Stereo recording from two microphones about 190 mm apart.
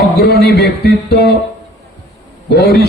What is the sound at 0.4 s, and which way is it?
Speech, 60° left (ahead or behind).